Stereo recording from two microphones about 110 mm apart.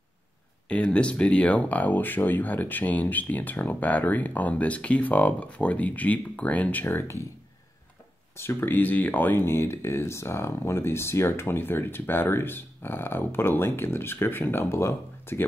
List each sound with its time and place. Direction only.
0.7 s speech: 10° left (ahead or behind)
8.4 s speech: 20° left (ahead or behind)